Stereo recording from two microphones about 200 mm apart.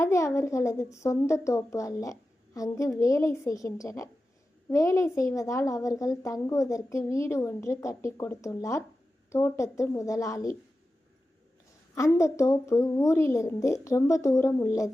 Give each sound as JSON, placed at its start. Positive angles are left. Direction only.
{"t": 0.0, "sound": "a child's voice", "side_deg": 15}
{"t": 11.9, "sound": "a child's voice", "side_deg": 15}